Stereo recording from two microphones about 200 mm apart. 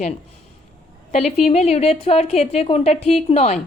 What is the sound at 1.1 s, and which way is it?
Speech, 35° left (ahead or behind).